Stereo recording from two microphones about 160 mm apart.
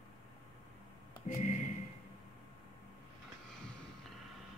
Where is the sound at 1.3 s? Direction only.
50° left (ahead or behind).